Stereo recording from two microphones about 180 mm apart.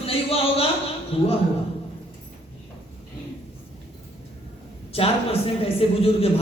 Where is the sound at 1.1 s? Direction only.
35° left (ahead or behind).